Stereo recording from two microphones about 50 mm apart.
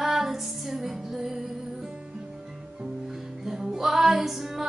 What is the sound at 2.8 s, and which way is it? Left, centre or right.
Music, centre.